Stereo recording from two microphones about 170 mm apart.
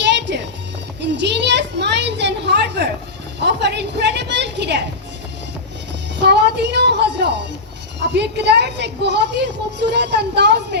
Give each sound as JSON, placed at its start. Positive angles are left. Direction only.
{"t": 0.2, "sound": "music", "side_deg": -90}
{"t": 1.0, "sound": "a sound", "side_deg": -90}
{"t": 6.1, "sound": "music", "side_deg": -85}
{"t": 8.0, "sound": "a woman's voice", "side_deg": -85}